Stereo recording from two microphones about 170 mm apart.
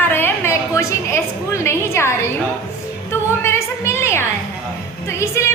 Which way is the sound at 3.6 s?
15° left (ahead or behind).